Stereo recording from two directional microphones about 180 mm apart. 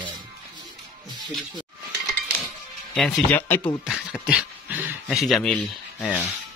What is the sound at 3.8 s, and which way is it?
Speech, 5° right (ahead or behind).